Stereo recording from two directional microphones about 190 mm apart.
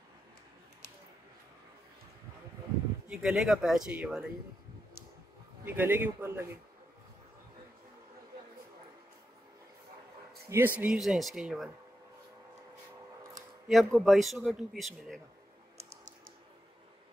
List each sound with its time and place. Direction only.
3.1 s a man's voice: centre (ahead or behind)
5.7 s a man's voice: 10° right (ahead or behind)
10.5 s a man's voice: 10° right (ahead or behind)
13.7 s a man's voice: centre (ahead or behind)